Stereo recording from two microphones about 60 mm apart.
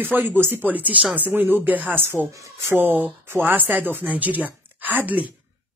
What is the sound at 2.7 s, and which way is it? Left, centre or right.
A woman's voice, right.